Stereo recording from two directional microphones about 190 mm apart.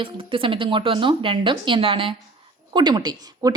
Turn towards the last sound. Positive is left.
turn(degrees=-20)  # may be behind; listen again after turning